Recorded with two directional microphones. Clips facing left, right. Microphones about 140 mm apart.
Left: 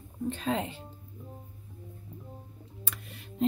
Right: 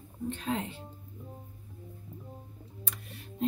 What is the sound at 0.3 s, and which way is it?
Speech, 90° left.